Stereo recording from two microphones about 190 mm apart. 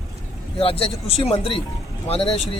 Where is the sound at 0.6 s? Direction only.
30° left (ahead or behind).